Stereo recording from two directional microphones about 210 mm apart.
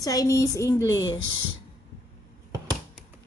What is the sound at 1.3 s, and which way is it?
Speech, 70° right (ahead or behind).